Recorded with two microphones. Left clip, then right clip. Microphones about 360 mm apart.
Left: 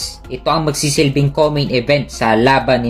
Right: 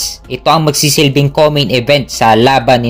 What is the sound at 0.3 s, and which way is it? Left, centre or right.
Speech, right.